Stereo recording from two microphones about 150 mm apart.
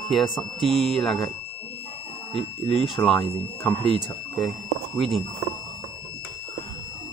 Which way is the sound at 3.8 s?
30° left (ahead or behind).